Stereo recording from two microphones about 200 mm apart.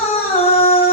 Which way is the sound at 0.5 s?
30° left (ahead or behind).